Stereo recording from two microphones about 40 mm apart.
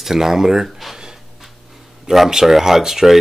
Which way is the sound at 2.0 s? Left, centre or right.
Centre.